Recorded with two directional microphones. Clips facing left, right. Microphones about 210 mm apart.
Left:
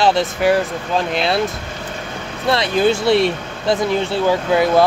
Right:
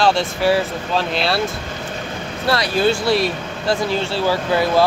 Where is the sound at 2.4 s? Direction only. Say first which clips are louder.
Left 2 dB; 20° left (ahead or behind).